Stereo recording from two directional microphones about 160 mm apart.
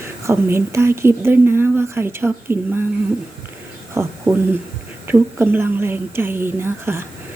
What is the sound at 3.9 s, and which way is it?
Speech, 15° right (ahead or behind).